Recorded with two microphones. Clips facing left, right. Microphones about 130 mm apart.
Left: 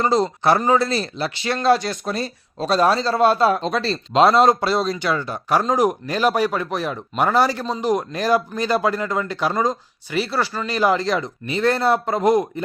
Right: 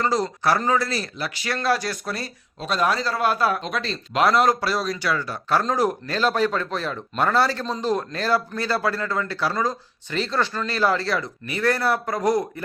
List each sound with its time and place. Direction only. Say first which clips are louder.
0.0 s speech: left 4 dB; 25° left (ahead or behind)
2.6 s speech: left 5 dB; 35° left (ahead or behind)